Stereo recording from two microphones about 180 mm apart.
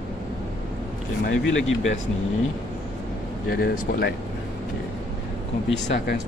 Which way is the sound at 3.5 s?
55° left (ahead or behind).